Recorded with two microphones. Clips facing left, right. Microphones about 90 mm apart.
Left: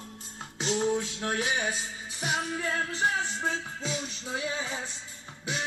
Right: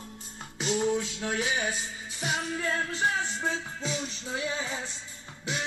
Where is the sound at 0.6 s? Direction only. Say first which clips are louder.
Even; 25° left (ahead or behind).